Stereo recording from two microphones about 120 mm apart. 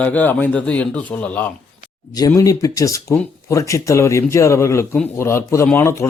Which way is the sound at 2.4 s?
30° left (ahead or behind).